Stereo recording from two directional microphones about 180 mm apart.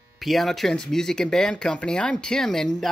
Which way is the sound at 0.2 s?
Centre (ahead or behind).